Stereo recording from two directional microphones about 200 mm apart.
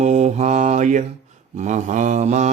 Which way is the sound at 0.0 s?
35° right (ahead or behind).